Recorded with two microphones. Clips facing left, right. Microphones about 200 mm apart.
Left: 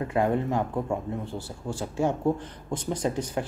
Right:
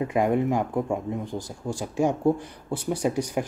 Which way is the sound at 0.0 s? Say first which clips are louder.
Right 2 dB; 15° right (ahead or behind).